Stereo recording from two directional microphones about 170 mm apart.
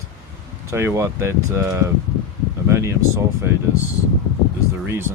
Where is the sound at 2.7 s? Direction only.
15° right (ahead or behind).